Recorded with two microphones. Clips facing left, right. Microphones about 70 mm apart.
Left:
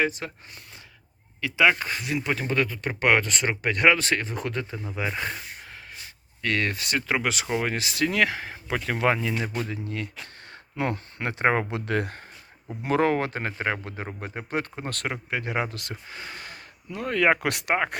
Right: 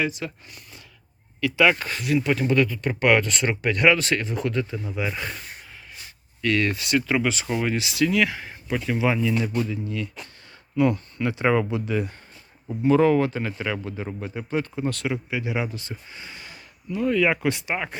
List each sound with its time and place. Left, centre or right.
0.0 s speech: left
1.4 s speech: centre; by 5.3 s left
6.4 s speech: left
8.4 s speech: left
10.5 s speech: left
11.7 s speech: left
12.8 s speech: left
15.7 s speech: left